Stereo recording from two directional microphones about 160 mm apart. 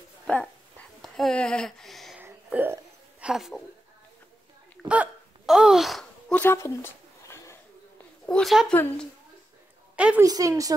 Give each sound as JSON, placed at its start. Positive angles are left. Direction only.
{"t": 0.3, "sound": "speech", "side_deg": 5}
{"t": 2.1, "sound": "hiccup", "side_deg": -10}
{"t": 4.8, "sound": "hiccup", "side_deg": -10}
{"t": 6.4, "sound": "a sound", "side_deg": 15}
{"t": 8.3, "sound": "speech", "side_deg": 0}
{"t": 9.9, "sound": "a woman's voice", "side_deg": -5}
{"t": 10.2, "sound": "a woman's voice", "side_deg": -20}